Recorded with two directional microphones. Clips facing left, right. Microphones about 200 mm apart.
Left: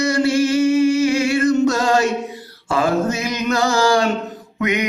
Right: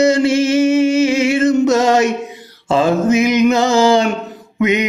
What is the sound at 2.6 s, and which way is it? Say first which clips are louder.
Mantra: right 5 dB; 20° right (ahead or behind).